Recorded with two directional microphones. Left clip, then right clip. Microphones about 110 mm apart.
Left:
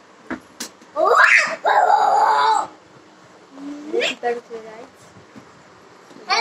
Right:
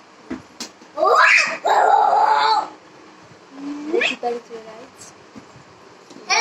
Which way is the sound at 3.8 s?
30° right (ahead or behind).